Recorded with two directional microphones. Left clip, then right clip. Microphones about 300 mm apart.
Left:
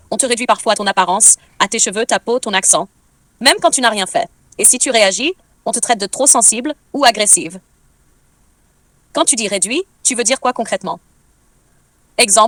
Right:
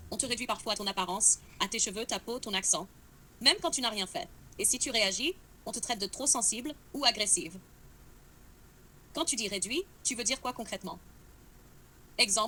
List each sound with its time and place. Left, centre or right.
0.1 s a woman's voice: left
9.1 s a woman's voice: left
12.1 s speech: left